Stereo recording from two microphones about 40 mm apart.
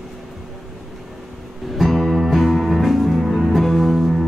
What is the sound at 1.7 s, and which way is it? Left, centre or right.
Music, centre.